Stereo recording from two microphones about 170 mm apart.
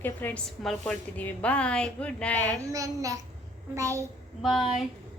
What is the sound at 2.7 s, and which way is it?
Speech, 20° right (ahead or behind).